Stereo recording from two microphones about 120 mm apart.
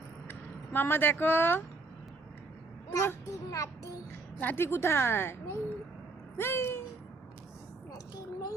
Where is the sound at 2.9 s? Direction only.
25° left (ahead or behind).